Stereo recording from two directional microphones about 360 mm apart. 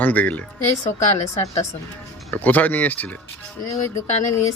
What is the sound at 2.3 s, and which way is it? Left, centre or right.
Speech, centre.